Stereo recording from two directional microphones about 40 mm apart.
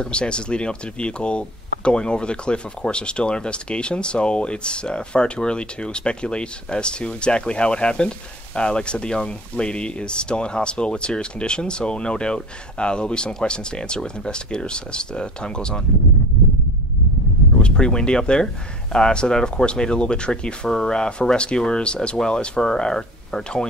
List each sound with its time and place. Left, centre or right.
0.0 s speech: left
17.6 s speech: left